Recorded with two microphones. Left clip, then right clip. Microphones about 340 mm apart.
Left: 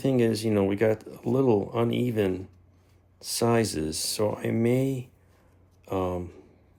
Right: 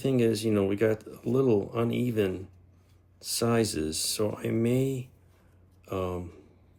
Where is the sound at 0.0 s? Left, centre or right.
Centre.